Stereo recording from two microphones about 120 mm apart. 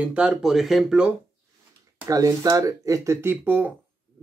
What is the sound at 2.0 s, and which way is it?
Speech, 30° right (ahead or behind).